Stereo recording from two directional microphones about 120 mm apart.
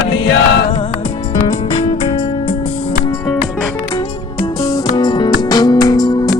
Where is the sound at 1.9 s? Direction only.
50° left (ahead or behind).